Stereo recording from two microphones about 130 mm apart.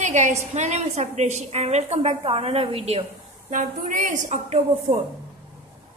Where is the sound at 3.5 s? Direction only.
90° right; by 4.6 s 70° right (ahead or behind).